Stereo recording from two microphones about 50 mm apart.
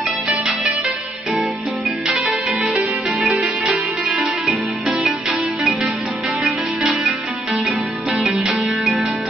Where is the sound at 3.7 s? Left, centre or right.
Right.